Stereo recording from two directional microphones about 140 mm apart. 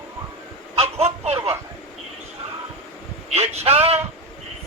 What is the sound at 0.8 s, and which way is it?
Speech, 50° right (ahead or behind).